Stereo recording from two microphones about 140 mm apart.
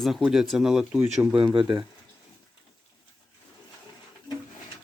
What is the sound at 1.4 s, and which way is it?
Speech, 40° right (ahead or behind).